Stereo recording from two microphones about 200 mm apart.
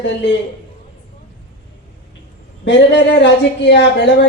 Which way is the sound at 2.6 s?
60° left (ahead or behind).